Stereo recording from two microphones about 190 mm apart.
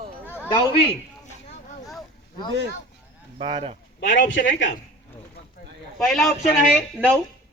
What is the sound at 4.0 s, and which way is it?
Speech, 45° left (ahead or behind).